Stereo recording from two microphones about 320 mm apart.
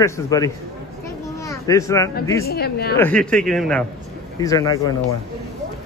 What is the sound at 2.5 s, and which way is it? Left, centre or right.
Speech, left.